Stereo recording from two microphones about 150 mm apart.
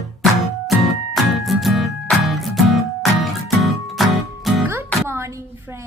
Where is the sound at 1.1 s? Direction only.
Centre (ahead or behind).